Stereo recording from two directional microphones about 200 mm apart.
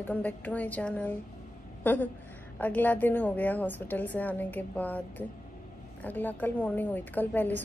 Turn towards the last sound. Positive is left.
turn(degrees=10)  # may be behind; listen again after turning